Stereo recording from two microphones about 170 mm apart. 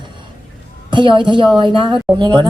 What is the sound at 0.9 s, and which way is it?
A woman's voice, 30° right (ahead or behind).